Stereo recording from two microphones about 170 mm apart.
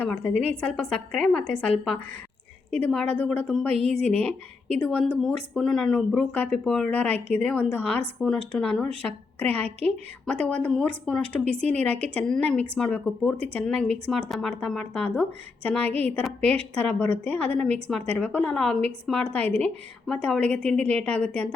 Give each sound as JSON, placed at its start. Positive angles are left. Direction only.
{"t": 0.6, "sound": "a woman's voice", "side_deg": 5}
{"t": 3.7, "sound": "a woman's voice", "side_deg": -40}
{"t": 3.9, "sound": "a woman's voice", "side_deg": 5}